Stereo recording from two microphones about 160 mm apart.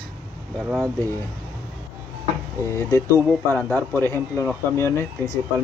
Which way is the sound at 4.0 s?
15° left (ahead or behind).